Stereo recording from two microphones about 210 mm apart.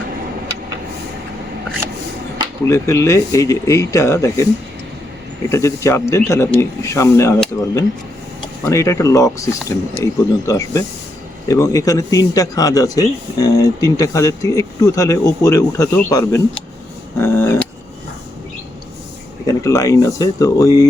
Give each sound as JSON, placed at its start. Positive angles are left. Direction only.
{"t": 2.6, "sound": "speech", "side_deg": 15}
{"t": 5.5, "sound": "speech", "side_deg": 15}
{"t": 8.6, "sound": "speech", "side_deg": 15}
{"t": 19.5, "sound": "speech", "side_deg": 15}